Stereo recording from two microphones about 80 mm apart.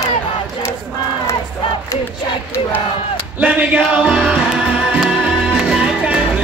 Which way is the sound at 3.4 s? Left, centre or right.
Centre.